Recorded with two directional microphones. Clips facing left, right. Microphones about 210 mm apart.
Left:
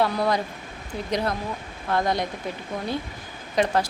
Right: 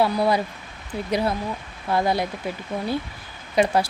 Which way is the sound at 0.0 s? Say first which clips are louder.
Right 2 dB; 10° right (ahead or behind).